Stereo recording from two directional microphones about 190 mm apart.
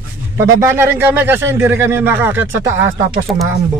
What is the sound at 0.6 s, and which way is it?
Speech, 15° right (ahead or behind).